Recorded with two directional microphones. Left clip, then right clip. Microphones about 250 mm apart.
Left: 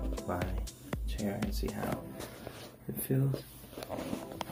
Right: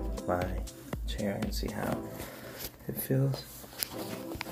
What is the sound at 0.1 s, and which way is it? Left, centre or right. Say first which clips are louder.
Music: right 6 dB; centre.